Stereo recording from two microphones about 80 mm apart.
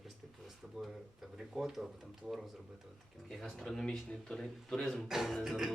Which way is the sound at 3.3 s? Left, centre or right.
Centre.